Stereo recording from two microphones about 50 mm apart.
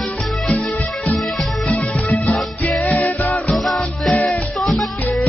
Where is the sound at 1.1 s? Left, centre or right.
Centre.